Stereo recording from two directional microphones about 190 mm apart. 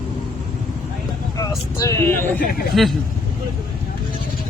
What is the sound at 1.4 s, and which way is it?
Speech, 15° left (ahead or behind).